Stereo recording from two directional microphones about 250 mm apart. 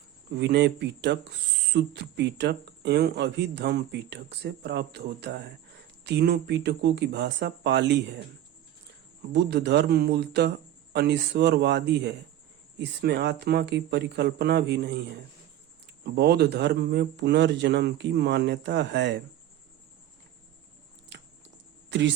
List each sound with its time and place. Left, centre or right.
0.3 s speech: right
9.3 s speech: right
16.0 s speech: right
21.1 s typing: right
21.8 s a sound: right